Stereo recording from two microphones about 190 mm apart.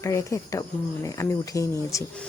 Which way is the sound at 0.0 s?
15° left (ahead or behind).